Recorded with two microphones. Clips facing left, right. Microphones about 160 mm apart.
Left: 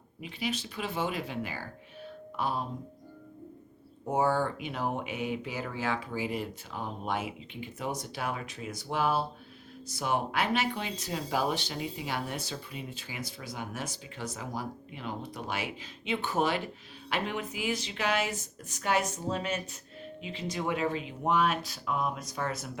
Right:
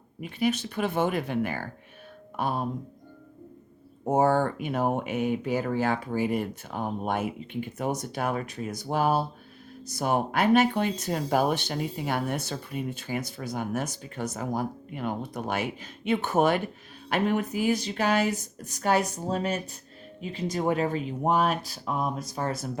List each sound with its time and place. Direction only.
0.2 s speech: 50° right (ahead or behind)
4.0 s speech: 45° right (ahead or behind)